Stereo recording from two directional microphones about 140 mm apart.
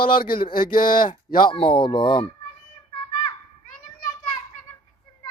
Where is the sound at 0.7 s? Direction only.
80° left.